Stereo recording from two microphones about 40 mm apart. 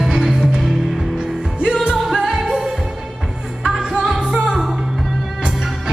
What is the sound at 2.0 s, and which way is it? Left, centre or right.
Music, centre.